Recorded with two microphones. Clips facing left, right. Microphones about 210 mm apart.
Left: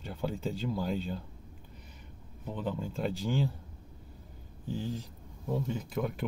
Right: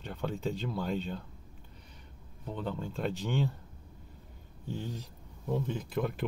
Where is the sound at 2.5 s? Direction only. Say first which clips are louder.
Left 1 dB; 5° left (ahead or behind).